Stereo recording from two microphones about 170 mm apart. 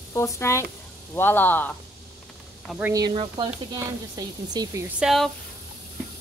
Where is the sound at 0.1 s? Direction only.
15° left (ahead or behind).